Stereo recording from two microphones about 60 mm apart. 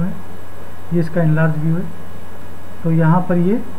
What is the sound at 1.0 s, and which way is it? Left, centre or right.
Speech, centre.